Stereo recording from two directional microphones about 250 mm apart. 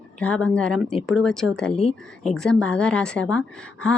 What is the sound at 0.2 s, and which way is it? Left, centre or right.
Speech, centre.